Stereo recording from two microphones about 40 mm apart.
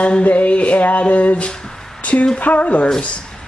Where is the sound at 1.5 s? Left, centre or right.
Centre.